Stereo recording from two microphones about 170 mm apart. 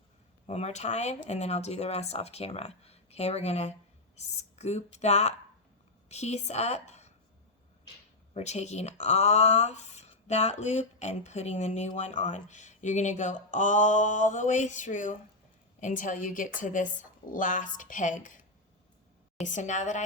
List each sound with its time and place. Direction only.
0.4 s a woman's voice: 40° left (ahead or behind)
8.3 s speech: 40° left (ahead or behind)
19.5 s speech: 45° left (ahead or behind)